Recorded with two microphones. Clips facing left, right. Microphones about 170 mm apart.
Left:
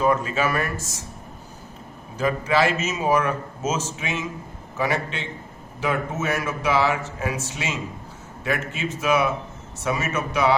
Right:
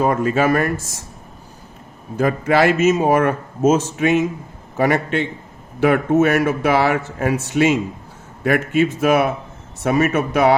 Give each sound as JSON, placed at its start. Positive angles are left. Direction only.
{"t": 0.0, "sound": "a man's voice", "side_deg": -50}
{"t": 2.1, "sound": "a man's voice", "side_deg": -55}